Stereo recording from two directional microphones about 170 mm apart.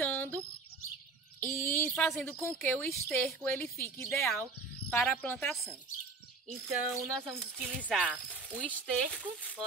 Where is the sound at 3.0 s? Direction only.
Centre (ahead or behind).